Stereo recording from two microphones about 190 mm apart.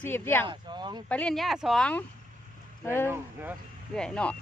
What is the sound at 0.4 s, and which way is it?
Speech, 25° right (ahead or behind).